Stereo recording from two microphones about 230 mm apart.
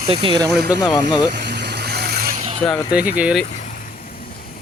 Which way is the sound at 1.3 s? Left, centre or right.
Right.